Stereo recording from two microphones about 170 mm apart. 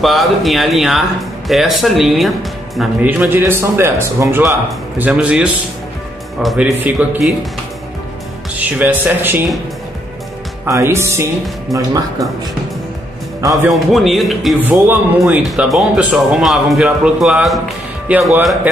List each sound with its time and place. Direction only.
0.0 s speech: centre (ahead or behind)
8.5 s speech: 10° right (ahead or behind)
10.7 s speech: 15° right (ahead or behind)
13.5 s speech: centre (ahead or behind)
14.6 s speech: 10° right (ahead or behind)